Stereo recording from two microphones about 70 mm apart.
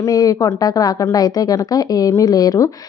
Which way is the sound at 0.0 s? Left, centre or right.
Left.